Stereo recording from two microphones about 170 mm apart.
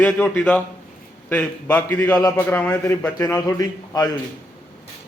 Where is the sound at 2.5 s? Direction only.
10° left (ahead or behind).